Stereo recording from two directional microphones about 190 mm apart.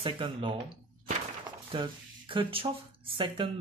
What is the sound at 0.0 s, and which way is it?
Speech, 25° right (ahead or behind).